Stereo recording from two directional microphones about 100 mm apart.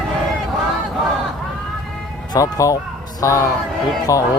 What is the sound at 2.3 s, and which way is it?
Speech, 35° left (ahead or behind).